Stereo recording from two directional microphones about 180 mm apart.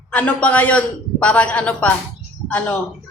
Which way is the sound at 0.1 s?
10° left (ahead or behind).